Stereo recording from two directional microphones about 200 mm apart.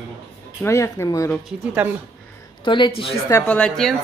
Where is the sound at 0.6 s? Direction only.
15° left (ahead or behind).